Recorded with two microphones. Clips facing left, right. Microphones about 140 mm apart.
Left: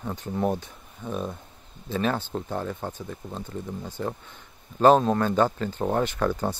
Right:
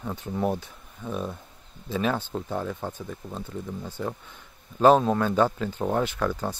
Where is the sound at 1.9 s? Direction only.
5° right (ahead or behind).